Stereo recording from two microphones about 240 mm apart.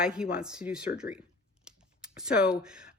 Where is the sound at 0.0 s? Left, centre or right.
Centre.